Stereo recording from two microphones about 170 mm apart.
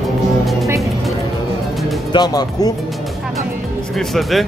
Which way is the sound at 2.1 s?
25° left (ahead or behind).